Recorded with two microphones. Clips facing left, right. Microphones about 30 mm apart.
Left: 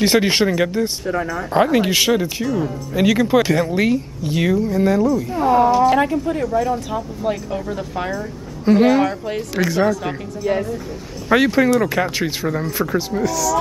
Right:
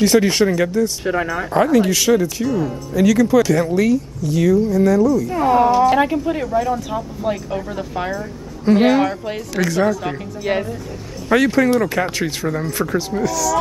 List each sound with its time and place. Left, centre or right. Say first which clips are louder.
0.0 s speech: right 1 dB; left
5.3 s speech: left 2 dB; centre
6.4 s speech: even; centre
9.6 s speech: even; centre
9.8 s speech: even; centre
10.5 s speech: even; right
11.2 s speech: even; centre